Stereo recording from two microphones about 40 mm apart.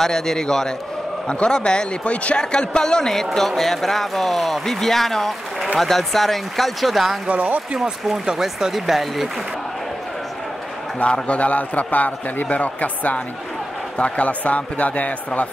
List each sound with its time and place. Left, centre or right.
0.0 s a man's voice: centre
7.2 s speech: right
8.3 s speech: centre
8.7 s speech: centre
11.1 s a man's voice: left